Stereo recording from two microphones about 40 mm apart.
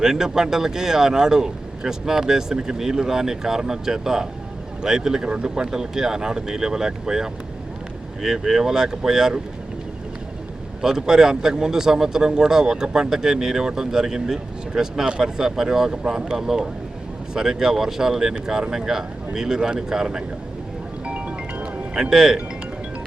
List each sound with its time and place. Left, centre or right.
0.0 s a man's voice: centre
10.8 s a man's voice: centre
21.0 s music: right
22.1 s a man's voice: centre